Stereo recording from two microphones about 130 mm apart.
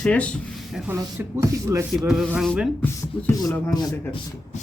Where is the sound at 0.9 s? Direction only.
20° right (ahead or behind).